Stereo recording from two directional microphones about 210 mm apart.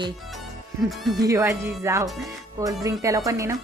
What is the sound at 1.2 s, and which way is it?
A woman's voice, 15° right (ahead or behind).